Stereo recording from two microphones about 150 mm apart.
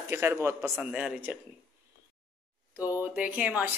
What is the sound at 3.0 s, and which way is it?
Speech, 10° right (ahead or behind).